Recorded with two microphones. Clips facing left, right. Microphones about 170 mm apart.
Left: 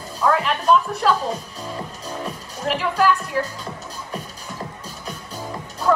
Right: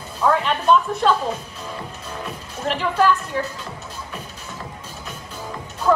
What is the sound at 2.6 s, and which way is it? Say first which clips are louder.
Speech: even; 5° left (ahead or behind).